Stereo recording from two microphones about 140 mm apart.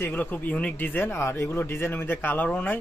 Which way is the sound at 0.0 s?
15° left (ahead or behind).